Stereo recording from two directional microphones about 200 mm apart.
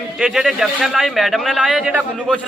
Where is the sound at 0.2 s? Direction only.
5° right (ahead or behind).